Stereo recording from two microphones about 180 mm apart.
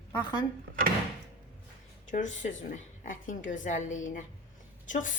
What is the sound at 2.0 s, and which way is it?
A woman's voice, 45° left (ahead or behind).